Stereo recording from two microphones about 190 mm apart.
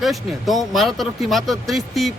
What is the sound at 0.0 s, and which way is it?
Speech, centre (ahead or behind).